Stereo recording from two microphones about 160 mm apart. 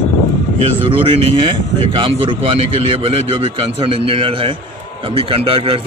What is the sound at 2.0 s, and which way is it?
A man's voice, 35° right (ahead or behind).